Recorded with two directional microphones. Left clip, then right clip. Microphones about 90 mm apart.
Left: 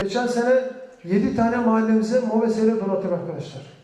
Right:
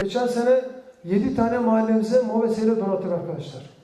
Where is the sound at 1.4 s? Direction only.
15° right (ahead or behind).